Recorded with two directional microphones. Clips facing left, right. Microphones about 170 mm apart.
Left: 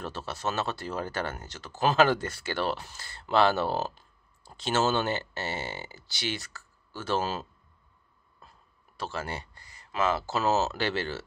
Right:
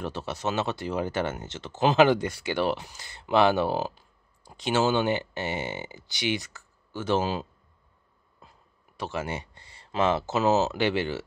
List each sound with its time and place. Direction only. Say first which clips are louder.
0.0 s speech: right 3 dB; 20° right (ahead or behind)